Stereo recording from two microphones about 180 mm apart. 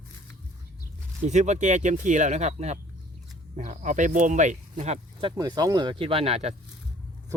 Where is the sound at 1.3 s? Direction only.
40° right (ahead or behind).